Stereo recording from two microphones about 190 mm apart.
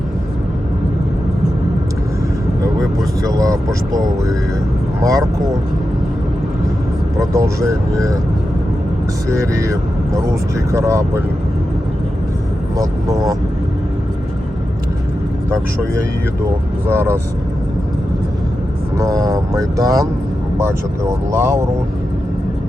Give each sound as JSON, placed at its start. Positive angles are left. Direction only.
{"t": 3.2, "sound": "speech", "side_deg": -20}
{"t": 7.2, "sound": "speech", "side_deg": -15}
{"t": 9.4, "sound": "speech", "side_deg": -15}
{"t": 12.7, "sound": "speech", "side_deg": -15}
{"t": 15.4, "sound": "speech", "side_deg": -15}
{"t": 18.9, "sound": "speech", "side_deg": -20}